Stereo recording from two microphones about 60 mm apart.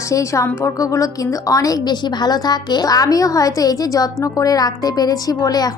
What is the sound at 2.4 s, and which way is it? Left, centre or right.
A woman's voice, left.